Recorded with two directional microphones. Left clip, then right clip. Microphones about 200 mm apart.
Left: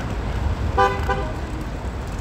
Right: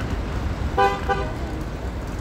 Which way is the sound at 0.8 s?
50° left (ahead or behind).